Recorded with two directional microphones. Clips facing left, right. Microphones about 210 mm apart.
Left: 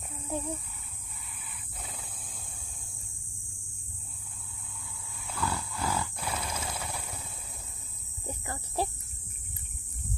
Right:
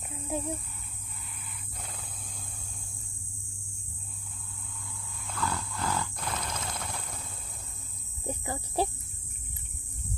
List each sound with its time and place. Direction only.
0.3 s speech: 10° right (ahead or behind)
1.8 s wild animals: centre (ahead or behind)
5.2 s wild animals: 10° left (ahead or behind)
8.3 s cricket: 20° right (ahead or behind)